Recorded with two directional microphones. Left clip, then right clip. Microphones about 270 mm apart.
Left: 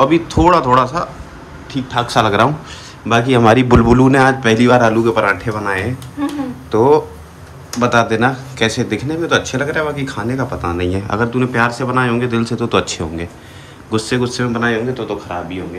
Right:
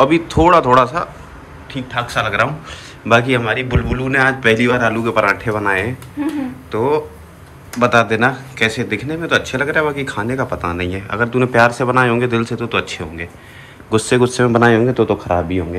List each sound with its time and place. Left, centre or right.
0.0 s speech: centre
3.4 s a man's voice: left
4.2 s speech: centre